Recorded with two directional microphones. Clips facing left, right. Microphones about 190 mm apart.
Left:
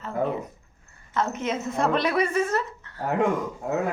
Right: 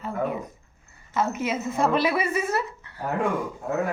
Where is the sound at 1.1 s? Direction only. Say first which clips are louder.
Right 1 dB; 10° right (ahead or behind).